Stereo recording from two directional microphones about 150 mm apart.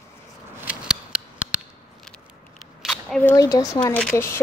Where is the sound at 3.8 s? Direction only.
10° left (ahead or behind).